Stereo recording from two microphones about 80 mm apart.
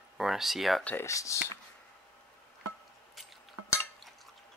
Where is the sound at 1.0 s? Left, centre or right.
Left.